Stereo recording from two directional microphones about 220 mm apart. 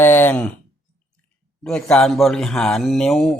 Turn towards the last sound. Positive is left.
turn(degrees=0)  # may be behind; listen again after turning